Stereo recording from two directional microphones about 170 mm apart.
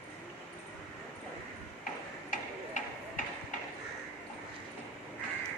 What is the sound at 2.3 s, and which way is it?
Tick-tock, 50° left (ahead or behind).